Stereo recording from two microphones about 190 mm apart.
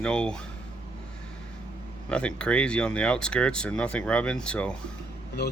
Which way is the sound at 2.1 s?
5° left (ahead or behind).